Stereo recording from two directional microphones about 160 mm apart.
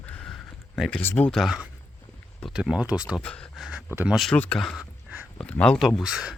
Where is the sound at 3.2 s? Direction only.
5° left (ahead or behind).